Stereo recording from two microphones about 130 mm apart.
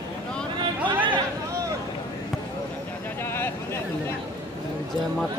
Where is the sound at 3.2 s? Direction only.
20° left (ahead or behind).